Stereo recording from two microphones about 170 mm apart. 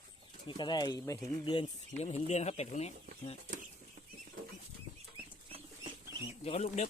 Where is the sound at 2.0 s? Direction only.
40° left (ahead or behind).